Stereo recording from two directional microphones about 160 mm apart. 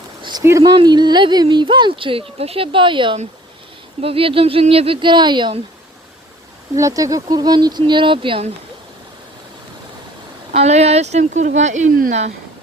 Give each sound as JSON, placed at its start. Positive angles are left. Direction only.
{"t": 0.2, "sound": "a sound", "side_deg": -25}
{"t": 0.6, "sound": "speech", "side_deg": -30}
{"t": 6.7, "sound": "speech", "side_deg": -20}
{"t": 10.5, "sound": "speech", "side_deg": -40}